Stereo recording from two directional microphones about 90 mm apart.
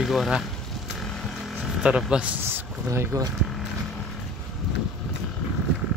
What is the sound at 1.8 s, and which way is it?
Speech, 10° right (ahead or behind).